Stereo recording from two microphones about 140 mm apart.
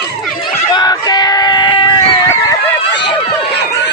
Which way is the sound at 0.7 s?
30° left (ahead or behind).